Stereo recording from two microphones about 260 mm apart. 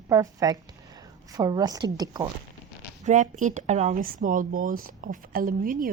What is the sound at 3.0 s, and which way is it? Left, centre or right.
A woman's voice, right.